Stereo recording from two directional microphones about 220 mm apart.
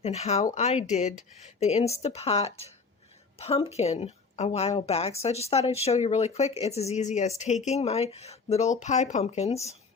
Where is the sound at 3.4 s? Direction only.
25° left (ahead or behind).